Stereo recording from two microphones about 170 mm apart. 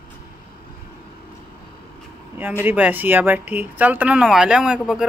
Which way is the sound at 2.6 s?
10° right (ahead or behind).